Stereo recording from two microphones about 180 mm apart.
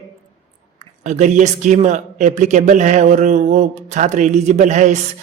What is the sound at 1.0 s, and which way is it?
Speech, 40° right (ahead or behind).